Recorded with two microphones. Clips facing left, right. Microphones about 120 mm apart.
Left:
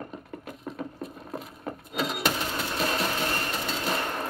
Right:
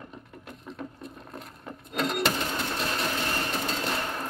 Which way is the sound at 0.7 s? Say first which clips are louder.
Left 3 dB; centre (ahead or behind).